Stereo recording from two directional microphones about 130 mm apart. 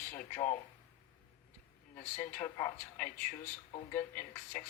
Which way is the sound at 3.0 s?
90° left.